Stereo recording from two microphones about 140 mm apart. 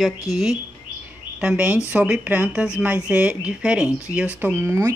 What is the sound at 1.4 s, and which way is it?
Speech, 5° right (ahead or behind).